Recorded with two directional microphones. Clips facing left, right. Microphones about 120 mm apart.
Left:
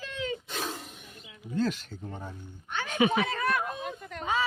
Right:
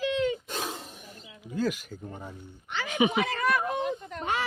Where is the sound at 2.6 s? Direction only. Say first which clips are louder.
Even; 90° right.